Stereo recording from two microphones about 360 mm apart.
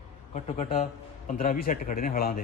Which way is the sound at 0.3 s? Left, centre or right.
Centre.